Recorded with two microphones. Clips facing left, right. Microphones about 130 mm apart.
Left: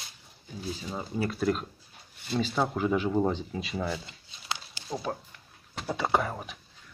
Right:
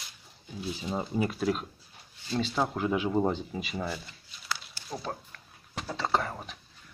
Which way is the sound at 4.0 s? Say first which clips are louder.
Left 1 dB; 20° left (ahead or behind).